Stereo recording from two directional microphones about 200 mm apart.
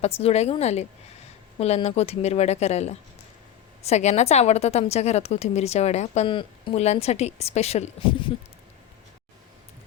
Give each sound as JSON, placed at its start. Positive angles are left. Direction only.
{"t": 0.0, "sound": "a woman's voice", "side_deg": 30}